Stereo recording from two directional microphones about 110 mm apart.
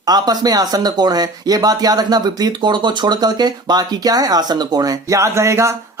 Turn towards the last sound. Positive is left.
turn(degrees=-25)  # may be behind; listen again after turning